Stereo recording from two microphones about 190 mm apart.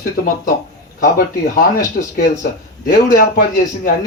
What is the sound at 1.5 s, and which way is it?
Speech, 45° left (ahead or behind).